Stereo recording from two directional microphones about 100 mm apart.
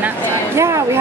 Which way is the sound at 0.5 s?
30° right (ahead or behind).